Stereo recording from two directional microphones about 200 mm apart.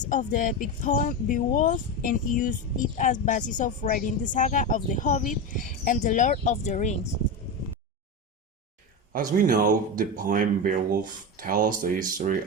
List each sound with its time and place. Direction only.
0.1 s speech: 40° left (ahead or behind)
9.4 s speech: 40° right (ahead or behind)